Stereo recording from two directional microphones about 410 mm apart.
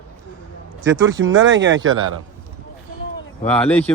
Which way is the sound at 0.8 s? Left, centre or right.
Right.